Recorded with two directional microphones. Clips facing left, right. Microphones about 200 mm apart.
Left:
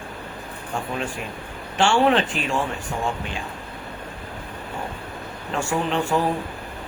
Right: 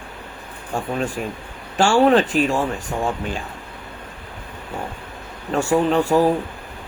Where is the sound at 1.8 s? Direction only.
40° right (ahead or behind).